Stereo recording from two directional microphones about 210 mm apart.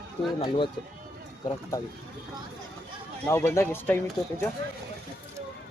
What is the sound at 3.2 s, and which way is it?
Speech, 10° left (ahead or behind).